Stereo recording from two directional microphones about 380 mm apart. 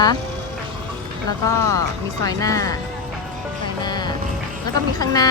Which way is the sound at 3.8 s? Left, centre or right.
Centre.